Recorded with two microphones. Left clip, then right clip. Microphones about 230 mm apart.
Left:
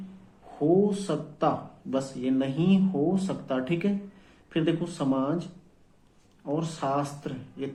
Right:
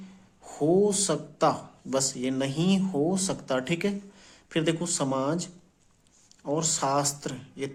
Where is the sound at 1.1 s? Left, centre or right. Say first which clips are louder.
Right 2 dB; right.